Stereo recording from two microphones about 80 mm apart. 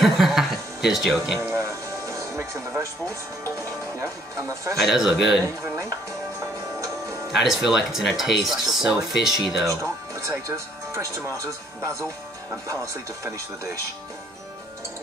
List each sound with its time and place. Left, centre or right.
0.0 s chuckle: centre
1.5 s music: right
4.0 s speech: right
4.7 s speech: centre
5.6 s speech: right
7.3 s speech: centre
10.2 s speech: right